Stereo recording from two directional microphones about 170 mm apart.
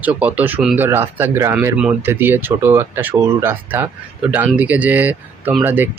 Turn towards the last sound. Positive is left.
turn(degrees=-10)  # may be behind; listen again after turning